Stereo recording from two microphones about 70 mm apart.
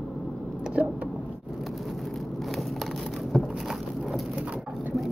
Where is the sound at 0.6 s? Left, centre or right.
Centre.